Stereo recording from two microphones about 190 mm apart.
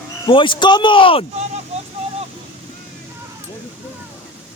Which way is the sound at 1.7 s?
35° right (ahead or behind).